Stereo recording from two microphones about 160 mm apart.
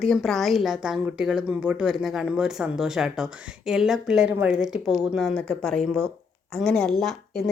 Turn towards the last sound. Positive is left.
turn(degrees=0)  # may be behind; listen again after turning